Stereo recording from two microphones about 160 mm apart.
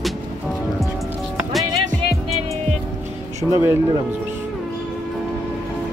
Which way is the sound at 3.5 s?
15° right (ahead or behind).